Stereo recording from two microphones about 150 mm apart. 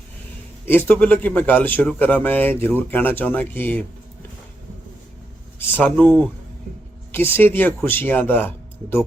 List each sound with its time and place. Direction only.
0.6 s a man's voice: 15° left (ahead or behind)
5.7 s a man's voice: 10° left (ahead or behind)